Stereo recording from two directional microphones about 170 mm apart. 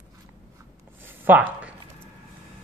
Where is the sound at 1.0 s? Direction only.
10° right (ahead or behind).